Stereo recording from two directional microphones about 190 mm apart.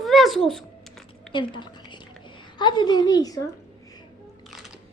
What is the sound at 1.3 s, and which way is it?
A woman's voice, 25° left (ahead or behind).